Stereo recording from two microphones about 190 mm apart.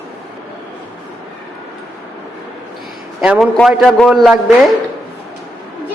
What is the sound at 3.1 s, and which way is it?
A man's voice, 5° right (ahead or behind).